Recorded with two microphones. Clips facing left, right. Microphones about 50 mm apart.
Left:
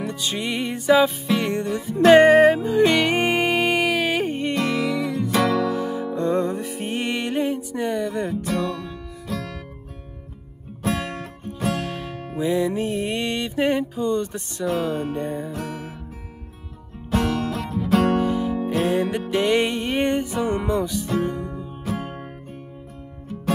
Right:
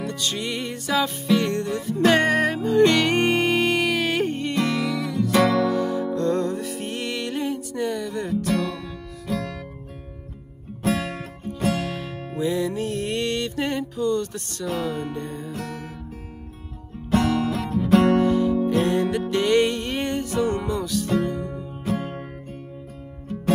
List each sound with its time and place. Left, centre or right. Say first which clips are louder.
0.0 s music: left 1 dB; centre
9.3 s music: right 2 dB; centre
10.8 s music: right 1 dB; centre
12.4 s music: left 2 dB; centre
14.7 s music: left 3 dB; centre
15.0 s music: left 4 dB; left; by 15.9 s centre
17.1 s music: right 2 dB; centre
18.2 s music: right 3 dB; centre